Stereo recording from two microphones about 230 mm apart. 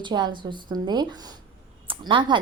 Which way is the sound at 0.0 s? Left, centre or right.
Centre.